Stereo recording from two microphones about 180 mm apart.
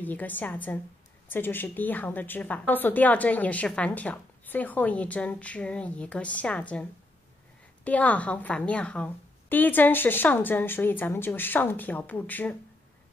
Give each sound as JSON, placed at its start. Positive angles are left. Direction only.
{"t": 0.0, "sound": "a woman's voice", "side_deg": 10}